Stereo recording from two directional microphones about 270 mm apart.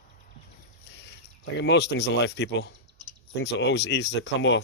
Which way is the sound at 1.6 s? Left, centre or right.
Left.